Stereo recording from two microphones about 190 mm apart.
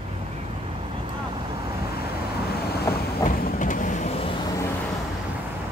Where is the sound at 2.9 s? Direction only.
15° left (ahead or behind).